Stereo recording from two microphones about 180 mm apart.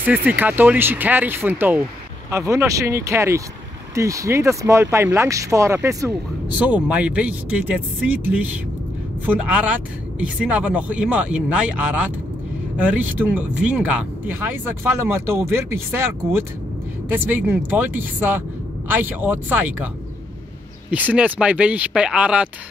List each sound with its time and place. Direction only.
0.0 s speech: 10° right (ahead or behind)
20.9 s speech: 10° right (ahead or behind)